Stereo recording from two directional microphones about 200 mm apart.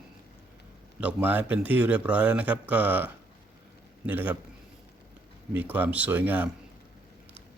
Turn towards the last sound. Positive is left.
turn(degrees=-10)  # may be behind; listen again after turning